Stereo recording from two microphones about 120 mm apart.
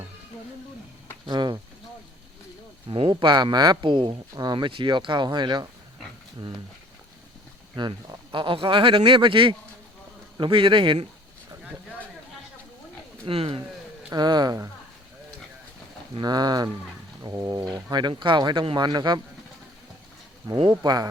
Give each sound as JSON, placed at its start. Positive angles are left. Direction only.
{"t": 1.3, "sound": "speech", "side_deg": -40}
{"t": 2.9, "sound": "speech", "side_deg": -45}
{"t": 7.8, "sound": "speech", "side_deg": -40}
{"t": 11.6, "sound": "a sound", "side_deg": -10}
{"t": 13.2, "sound": "speech", "side_deg": -50}
{"t": 14.1, "sound": "speech", "side_deg": -35}
{"t": 16.2, "sound": "speech", "side_deg": -35}
{"t": 20.7, "sound": "speech", "side_deg": -35}